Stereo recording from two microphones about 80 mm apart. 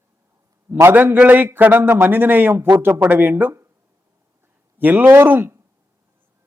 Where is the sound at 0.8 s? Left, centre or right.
Right.